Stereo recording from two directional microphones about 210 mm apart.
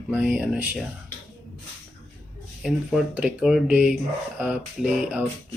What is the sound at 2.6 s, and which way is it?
Speech, centre (ahead or behind).